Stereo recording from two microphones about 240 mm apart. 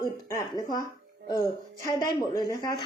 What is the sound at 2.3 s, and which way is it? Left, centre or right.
Speech, centre.